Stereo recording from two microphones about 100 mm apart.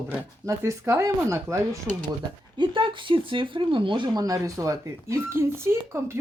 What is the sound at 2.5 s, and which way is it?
Speech, 55° right (ahead or behind).